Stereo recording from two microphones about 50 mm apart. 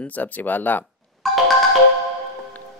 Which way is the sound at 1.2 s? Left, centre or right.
Centre.